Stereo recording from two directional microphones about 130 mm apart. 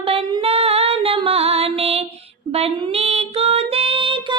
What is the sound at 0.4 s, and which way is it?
Female singing, 50° right (ahead or behind).